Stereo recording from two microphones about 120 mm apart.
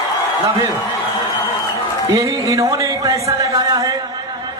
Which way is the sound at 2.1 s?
25° right (ahead or behind).